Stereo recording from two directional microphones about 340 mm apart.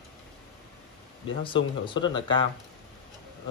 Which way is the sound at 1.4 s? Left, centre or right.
Centre.